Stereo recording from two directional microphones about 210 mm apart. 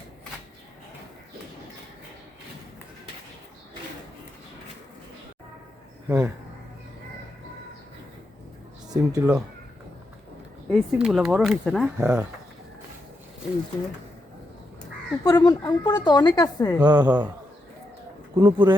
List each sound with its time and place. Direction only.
6.1 s speech: 15° right (ahead or behind)
8.9 s speech: 15° right (ahead or behind)
10.7 s speech: 5° right (ahead or behind)
15.2 s speech: 20° left (ahead or behind)
16.8 s speech: 20° right (ahead or behind)
17.1 s speech: 10° right (ahead or behind)
18.3 s speech: 20° right (ahead or behind)